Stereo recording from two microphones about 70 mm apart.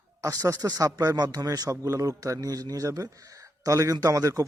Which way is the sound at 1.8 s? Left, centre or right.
Right.